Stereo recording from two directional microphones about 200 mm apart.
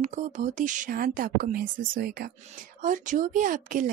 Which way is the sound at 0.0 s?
40° right (ahead or behind).